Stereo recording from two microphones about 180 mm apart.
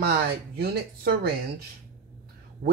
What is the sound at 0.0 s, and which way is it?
Speech, 60° right (ahead or behind).